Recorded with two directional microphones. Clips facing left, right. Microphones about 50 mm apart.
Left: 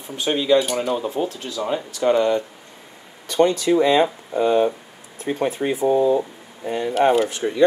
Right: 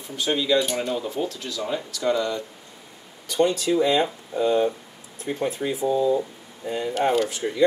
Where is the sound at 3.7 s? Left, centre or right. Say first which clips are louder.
Left 4 dB; left.